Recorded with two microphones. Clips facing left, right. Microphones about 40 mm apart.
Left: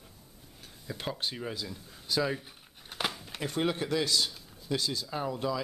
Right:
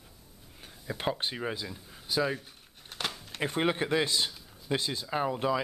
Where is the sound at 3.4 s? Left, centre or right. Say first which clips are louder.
Right 2 dB; right.